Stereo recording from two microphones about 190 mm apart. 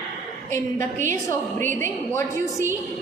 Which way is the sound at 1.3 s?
10° left (ahead or behind).